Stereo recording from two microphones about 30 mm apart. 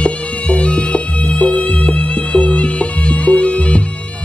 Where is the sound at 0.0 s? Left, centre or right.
Left.